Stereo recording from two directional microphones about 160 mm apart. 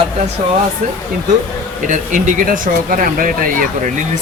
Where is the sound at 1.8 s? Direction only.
50° right (ahead or behind).